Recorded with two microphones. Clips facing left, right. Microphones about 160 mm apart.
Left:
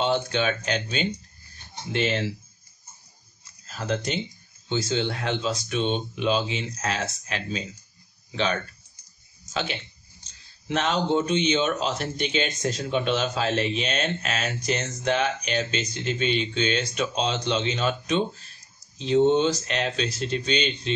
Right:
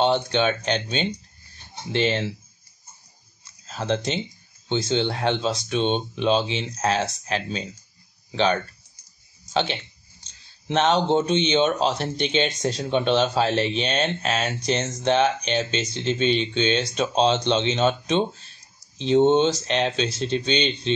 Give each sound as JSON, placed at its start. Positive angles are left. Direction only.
{"t": 0.0, "sound": "a man's voice", "side_deg": -30}
{"t": 3.6, "sound": "a man's voice", "side_deg": -30}
{"t": 9.5, "sound": "a man's voice", "side_deg": -30}